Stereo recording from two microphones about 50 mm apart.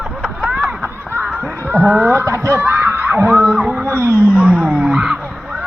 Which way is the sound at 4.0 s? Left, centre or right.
Right.